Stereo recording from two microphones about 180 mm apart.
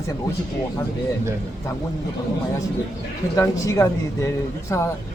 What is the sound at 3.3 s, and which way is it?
Speech, 15° left (ahead or behind).